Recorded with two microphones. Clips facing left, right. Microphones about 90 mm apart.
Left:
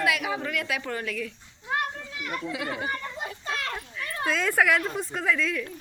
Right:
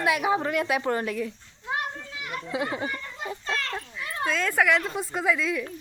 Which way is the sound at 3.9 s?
20° right (ahead or behind).